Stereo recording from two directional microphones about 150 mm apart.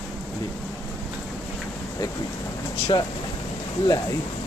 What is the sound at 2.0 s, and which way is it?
Speech, 25° left (ahead or behind).